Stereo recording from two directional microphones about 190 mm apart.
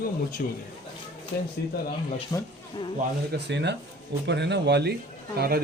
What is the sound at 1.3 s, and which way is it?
Speech, 60° left (ahead or behind).